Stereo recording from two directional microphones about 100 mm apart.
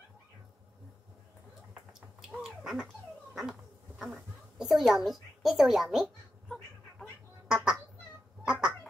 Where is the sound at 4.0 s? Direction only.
Centre (ahead or behind).